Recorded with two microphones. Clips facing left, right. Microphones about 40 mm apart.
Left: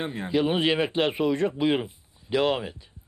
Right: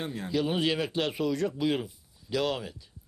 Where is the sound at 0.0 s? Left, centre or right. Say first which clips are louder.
Left 5 dB; left.